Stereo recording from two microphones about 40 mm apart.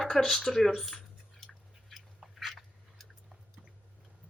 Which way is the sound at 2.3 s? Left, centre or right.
Centre.